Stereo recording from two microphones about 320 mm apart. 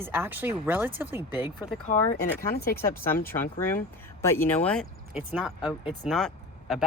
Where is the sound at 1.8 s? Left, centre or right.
Left.